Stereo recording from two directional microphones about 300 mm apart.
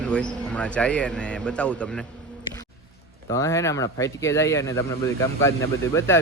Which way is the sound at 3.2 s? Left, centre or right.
Centre.